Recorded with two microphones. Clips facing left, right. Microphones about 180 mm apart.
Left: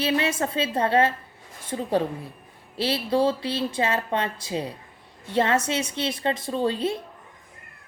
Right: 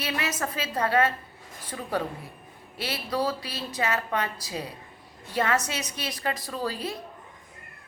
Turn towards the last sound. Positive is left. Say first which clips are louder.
# left 7 dB
turn(degrees=25)  # may be behind; listen again after turning